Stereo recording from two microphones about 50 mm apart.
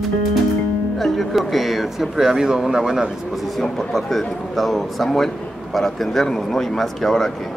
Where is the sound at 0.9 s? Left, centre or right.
Centre.